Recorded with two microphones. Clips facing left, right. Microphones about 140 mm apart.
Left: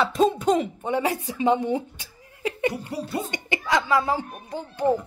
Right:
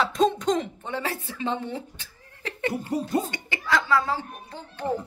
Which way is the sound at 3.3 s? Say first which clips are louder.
Left 2 dB; 20° left (ahead or behind).